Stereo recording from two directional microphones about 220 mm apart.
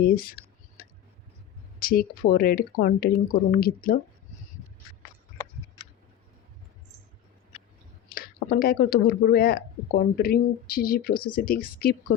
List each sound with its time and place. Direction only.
0.0 s whispering: 45° left (ahead or behind)
1.8 s speech: 45° left (ahead or behind)
8.1 s speech: 45° left (ahead or behind)
11.1 s speech: 20° left (ahead or behind)
11.3 s speech: 40° left (ahead or behind)